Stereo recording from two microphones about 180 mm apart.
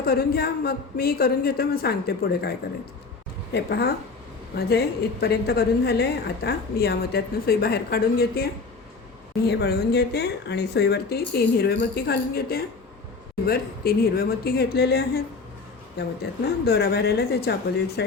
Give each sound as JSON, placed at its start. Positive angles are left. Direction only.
{"t": 0.0, "sound": "a woman's voice", "side_deg": 55}
{"t": 9.5, "sound": "a woman's voice", "side_deg": 60}